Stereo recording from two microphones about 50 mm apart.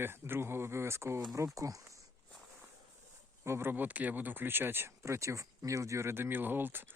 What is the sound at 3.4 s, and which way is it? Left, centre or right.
Speech, right.